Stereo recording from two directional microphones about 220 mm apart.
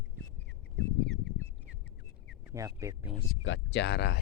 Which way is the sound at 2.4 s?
15° right (ahead or behind).